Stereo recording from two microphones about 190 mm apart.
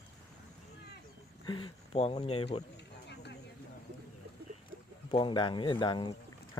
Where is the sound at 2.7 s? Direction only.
60° left (ahead or behind).